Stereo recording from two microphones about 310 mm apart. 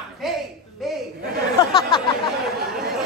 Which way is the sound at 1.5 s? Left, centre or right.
Centre.